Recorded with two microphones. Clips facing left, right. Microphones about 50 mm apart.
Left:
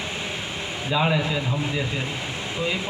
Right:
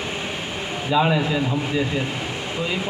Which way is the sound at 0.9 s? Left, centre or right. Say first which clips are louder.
Right 3 dB; centre.